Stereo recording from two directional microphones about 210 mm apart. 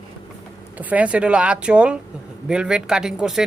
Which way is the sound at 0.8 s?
5° right (ahead or behind).